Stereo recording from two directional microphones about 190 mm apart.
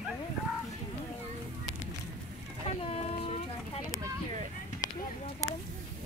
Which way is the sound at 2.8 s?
30° left (ahead or behind).